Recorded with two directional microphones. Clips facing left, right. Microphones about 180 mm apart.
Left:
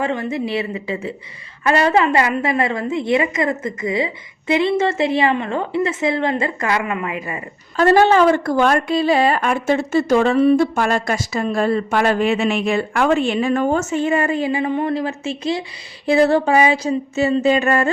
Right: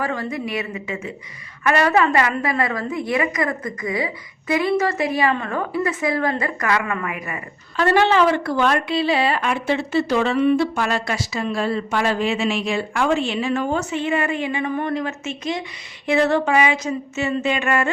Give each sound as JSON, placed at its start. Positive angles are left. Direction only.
{"t": 0.0, "sound": "a woman's voice", "side_deg": 25}
{"t": 7.8, "sound": "a woman's voice", "side_deg": 40}